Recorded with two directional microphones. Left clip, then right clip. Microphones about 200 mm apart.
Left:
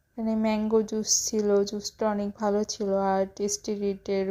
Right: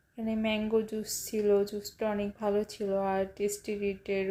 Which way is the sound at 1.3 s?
30° left (ahead or behind).